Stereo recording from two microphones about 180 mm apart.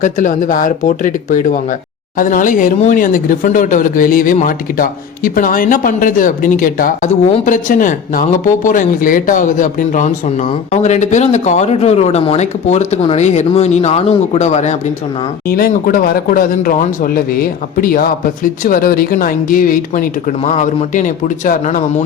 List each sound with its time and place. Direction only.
0.0 s speech: 45° left (ahead or behind)
15.4 s speech: 55° left (ahead or behind)